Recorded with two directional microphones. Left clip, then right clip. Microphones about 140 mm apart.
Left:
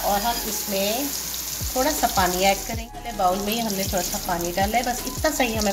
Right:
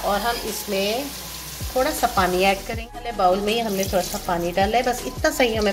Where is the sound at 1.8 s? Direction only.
10° right (ahead or behind).